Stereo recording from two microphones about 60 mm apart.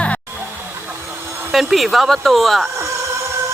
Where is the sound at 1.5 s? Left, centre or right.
Centre.